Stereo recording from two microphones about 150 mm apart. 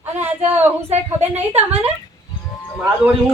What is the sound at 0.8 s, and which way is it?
Speech, 45° right (ahead or behind).